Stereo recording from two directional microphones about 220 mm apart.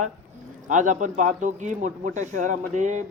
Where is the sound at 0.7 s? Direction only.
35° right (ahead or behind).